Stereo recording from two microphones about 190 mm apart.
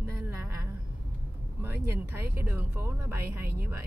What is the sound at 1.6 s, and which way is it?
Speech, 10° right (ahead or behind).